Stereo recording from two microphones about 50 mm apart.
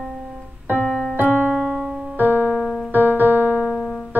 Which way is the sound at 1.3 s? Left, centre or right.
Right.